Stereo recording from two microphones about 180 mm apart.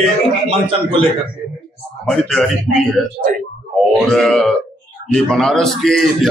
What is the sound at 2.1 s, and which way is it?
Speech, 5° left (ahead or behind).